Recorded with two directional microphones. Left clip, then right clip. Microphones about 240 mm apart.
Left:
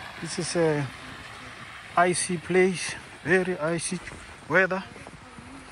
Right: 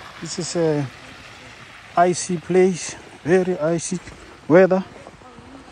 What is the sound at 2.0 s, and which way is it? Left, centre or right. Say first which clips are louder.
Speech: right 5 dB; centre.